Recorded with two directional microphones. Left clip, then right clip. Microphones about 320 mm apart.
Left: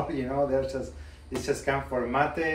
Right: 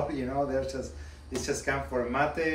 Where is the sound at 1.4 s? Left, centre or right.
Centre.